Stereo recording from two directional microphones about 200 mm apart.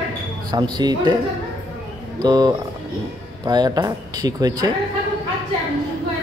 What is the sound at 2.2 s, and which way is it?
Speech, 20° right (ahead or behind).